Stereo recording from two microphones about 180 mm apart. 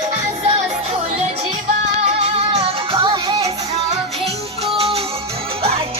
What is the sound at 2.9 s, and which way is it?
Music, 25° right (ahead or behind).